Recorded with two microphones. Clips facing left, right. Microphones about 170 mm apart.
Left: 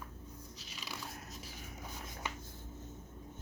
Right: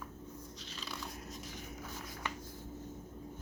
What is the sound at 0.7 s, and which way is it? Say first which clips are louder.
Biting: right 1 dB; 5° left (ahead or behind).